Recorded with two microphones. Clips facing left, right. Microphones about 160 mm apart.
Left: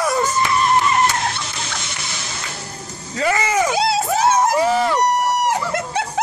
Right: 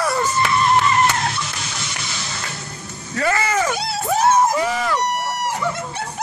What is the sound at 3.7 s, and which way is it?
Crowd, 90° left.